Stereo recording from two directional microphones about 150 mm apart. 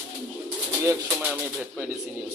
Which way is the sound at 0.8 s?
15° right (ahead or behind).